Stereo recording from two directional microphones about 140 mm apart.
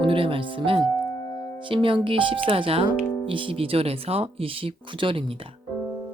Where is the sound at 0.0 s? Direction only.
40° right (ahead or behind).